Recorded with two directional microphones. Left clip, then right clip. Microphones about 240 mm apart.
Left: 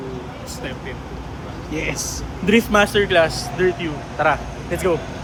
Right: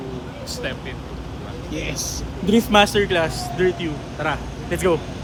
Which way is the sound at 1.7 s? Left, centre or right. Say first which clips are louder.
Left 4 dB; left.